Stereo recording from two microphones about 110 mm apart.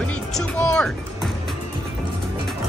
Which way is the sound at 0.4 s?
5° left (ahead or behind).